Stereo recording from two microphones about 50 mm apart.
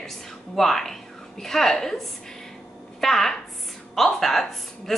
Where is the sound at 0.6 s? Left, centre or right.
Centre.